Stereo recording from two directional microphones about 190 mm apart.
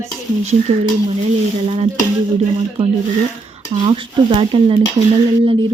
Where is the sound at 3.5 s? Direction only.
25° right (ahead or behind).